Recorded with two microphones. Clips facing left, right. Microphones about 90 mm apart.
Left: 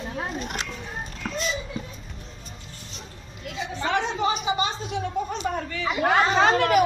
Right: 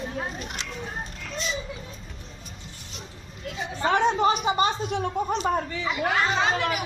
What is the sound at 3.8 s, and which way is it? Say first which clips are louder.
Speech: right 4 dB; 40° right (ahead or behind).